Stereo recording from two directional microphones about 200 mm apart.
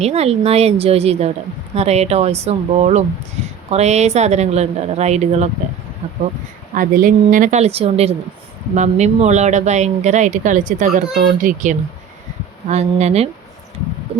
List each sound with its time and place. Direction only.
0.0 s speech: 30° right (ahead or behind)